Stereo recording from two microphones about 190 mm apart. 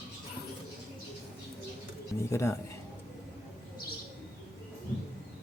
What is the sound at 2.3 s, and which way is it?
Speech, 15° left (ahead or behind).